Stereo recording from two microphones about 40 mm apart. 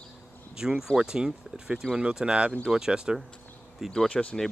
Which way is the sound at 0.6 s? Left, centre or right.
Centre.